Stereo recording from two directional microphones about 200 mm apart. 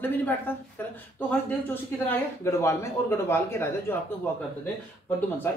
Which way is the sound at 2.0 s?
15° left (ahead or behind).